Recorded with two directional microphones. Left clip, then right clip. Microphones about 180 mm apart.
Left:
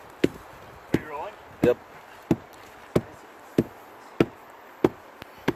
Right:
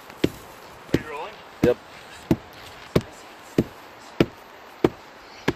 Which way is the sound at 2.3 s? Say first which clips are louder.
Right 2 dB; 15° left (ahead or behind).